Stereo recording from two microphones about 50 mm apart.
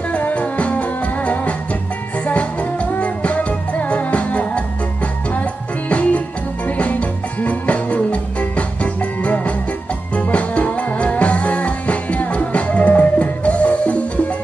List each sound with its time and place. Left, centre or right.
0.1 s music: left